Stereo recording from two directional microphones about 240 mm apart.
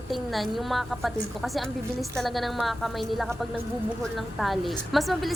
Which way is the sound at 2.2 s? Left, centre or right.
Centre.